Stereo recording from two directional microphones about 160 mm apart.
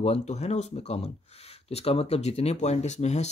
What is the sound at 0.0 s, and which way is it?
Speech, 40° left (ahead or behind).